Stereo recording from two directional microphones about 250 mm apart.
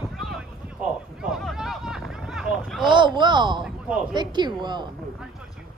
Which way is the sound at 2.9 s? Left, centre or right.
Centre.